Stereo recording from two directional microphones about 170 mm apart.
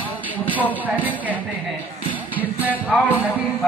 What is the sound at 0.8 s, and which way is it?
Speech, 10° right (ahead or behind).